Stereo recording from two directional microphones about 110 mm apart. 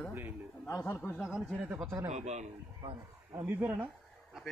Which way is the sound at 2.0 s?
90° right.